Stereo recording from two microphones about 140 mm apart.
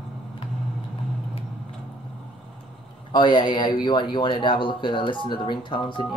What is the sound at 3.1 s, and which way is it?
Speech, 35° left (ahead or behind).